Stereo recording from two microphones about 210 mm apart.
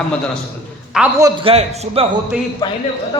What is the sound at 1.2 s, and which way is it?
Speech, 25° right (ahead or behind).